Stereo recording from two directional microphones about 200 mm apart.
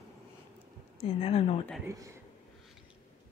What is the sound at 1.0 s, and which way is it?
Speech, 30° left (ahead or behind).